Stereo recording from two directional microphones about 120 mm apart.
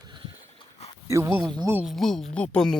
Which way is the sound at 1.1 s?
20° right (ahead or behind).